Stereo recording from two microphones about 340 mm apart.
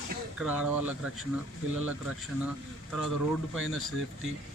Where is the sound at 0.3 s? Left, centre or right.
Centre.